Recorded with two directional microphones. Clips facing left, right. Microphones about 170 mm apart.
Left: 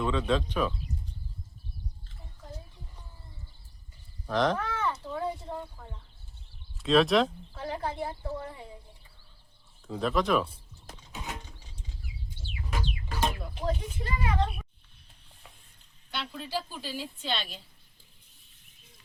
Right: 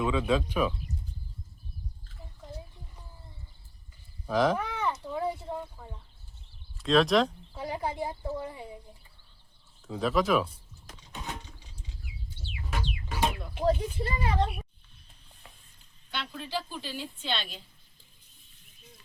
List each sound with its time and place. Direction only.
0.0 s speech: 5° right (ahead or behind)
4.3 s a sound: 5° right (ahead or behind)
6.7 s speech: centre (ahead or behind)
7.5 s speech: 10° right (ahead or behind)
9.8 s a woman's voice: centre (ahead or behind)
12.7 s chicken: centre (ahead or behind)
13.7 s speech: 35° right (ahead or behind)
16.1 s a woman's voice: 5° left (ahead or behind)